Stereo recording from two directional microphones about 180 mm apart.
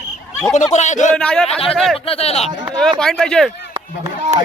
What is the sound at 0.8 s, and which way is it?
Speech, 40° left (ahead or behind).